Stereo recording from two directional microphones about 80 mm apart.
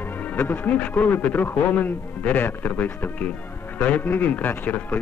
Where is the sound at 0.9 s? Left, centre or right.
Left.